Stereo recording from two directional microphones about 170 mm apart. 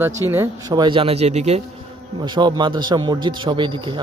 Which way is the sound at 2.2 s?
25° right (ahead or behind).